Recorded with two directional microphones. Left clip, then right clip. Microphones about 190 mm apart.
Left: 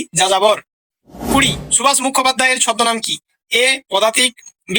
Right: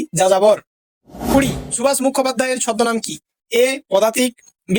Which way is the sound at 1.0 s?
Centre (ahead or behind).